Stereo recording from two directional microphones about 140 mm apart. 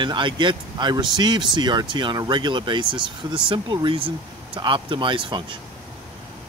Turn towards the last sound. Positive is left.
turn(degrees=-35)  # may be behind; listen again after turning